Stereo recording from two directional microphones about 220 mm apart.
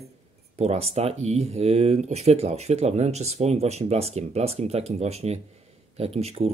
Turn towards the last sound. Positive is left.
turn(degrees=-30)  # may be behind; listen again after turning